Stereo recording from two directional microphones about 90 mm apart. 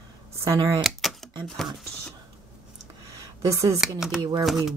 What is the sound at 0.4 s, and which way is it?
Speech, 35° right (ahead or behind).